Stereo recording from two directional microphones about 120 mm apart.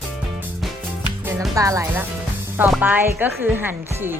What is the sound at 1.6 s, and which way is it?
Speech, 25° right (ahead or behind).